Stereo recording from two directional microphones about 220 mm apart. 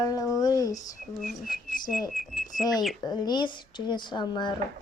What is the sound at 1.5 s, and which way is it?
Whistling, 40° left (ahead or behind).